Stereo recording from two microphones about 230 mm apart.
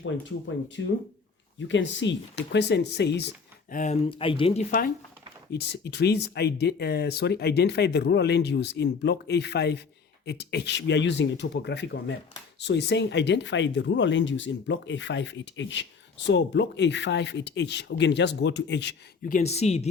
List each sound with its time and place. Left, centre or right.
0.8 s speech: left
3.8 s speech: left
5.5 s speech: left
19.4 s speech: left